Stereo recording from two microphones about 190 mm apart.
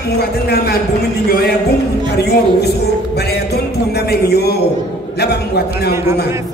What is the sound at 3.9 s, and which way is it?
A man's voice, 60° left (ahead or behind).